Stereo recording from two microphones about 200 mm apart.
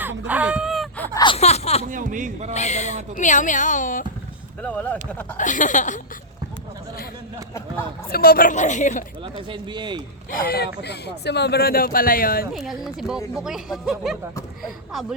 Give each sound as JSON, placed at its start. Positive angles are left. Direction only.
{"t": 0.3, "sound": "a sound", "side_deg": -5}
{"t": 1.1, "sound": "a sound", "side_deg": 25}
{"t": 1.8, "sound": "speech", "side_deg": -40}
{"t": 2.5, "sound": "a woman's voice", "side_deg": 35}
{"t": 4.6, "sound": "speech", "side_deg": 5}
{"t": 5.4, "sound": "a woman's voice", "side_deg": 40}
{"t": 8.1, "sound": "a woman's voice", "side_deg": 50}
{"t": 9.2, "sound": "speech", "side_deg": -25}
{"t": 10.3, "sound": "speech", "side_deg": 50}
{"t": 12.5, "sound": "speech", "side_deg": 0}